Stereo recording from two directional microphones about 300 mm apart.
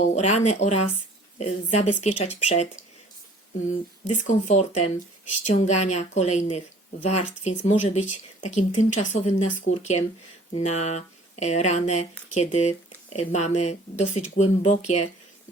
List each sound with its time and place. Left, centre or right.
0.0 s speech: left
3.7 s speech: left